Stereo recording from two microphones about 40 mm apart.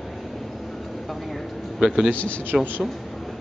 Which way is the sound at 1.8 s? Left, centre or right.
Centre.